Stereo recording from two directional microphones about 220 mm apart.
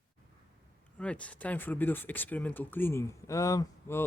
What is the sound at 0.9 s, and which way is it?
Speech, 5° left (ahead or behind).